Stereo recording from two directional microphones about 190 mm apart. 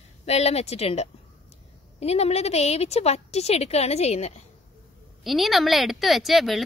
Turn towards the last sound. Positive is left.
turn(degrees=0)  # may be behind; listen again after turning